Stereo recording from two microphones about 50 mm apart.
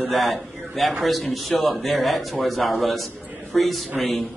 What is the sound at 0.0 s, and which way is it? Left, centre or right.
A man's voice, centre.